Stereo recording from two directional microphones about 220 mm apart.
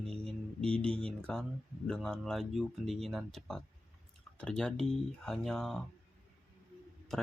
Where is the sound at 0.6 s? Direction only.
5° left (ahead or behind).